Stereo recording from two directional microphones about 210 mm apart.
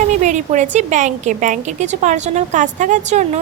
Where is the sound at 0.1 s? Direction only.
35° right (ahead or behind).